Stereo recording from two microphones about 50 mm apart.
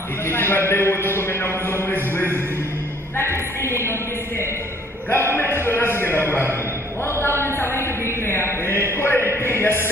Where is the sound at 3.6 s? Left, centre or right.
Left.